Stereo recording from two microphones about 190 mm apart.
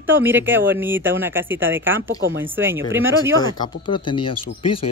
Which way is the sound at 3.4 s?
25° left (ahead or behind).